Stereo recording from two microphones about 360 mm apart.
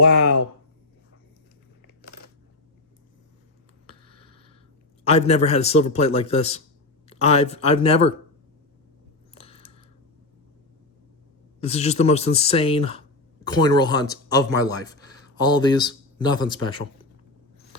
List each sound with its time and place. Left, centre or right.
5.0 s a man's voice: centre
9.4 s a sound: centre
11.6 s a man's voice: centre